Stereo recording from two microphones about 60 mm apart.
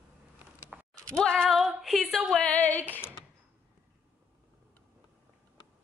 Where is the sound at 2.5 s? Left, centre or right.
Left.